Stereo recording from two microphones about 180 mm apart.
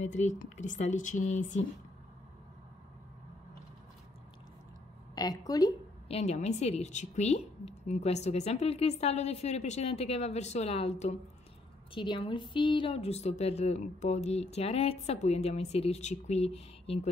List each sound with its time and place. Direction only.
0.0 s speech: 40° left (ahead or behind)
5.1 s a woman's voice: 20° left (ahead or behind)
6.0 s speech: 35° left (ahead or behind)